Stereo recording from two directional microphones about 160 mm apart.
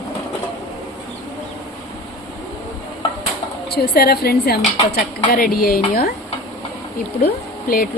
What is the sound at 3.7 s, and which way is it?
Speech, 75° left (ahead or behind).